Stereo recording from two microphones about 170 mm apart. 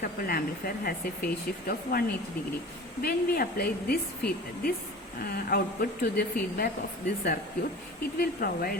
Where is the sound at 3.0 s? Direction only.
65° left (ahead or behind).